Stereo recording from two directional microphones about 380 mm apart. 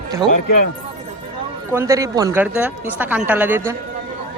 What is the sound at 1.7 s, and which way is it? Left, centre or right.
Speech, centre.